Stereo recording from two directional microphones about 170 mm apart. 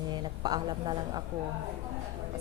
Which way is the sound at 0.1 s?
25° right (ahead or behind).